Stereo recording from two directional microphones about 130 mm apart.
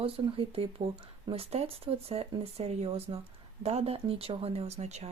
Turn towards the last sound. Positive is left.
turn(degrees=-55)  # may be behind; listen again after turning